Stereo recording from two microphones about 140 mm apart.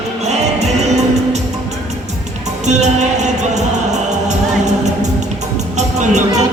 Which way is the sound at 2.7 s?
55° right (ahead or behind).